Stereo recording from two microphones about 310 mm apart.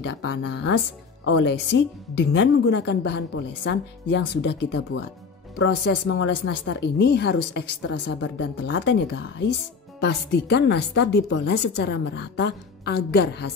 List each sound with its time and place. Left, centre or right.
0.0 s a woman's voice: left